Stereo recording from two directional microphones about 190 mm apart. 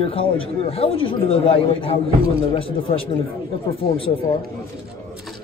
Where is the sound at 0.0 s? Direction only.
30° left (ahead or behind).